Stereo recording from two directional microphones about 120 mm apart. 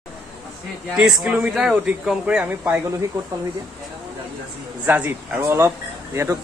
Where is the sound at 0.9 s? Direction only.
5° right (ahead or behind).